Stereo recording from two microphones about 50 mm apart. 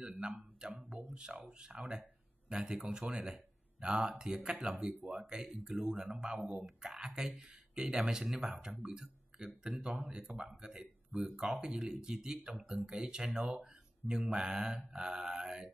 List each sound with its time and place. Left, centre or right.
0.2 s speech: centre
0.7 s music: centre
1.1 s speech: centre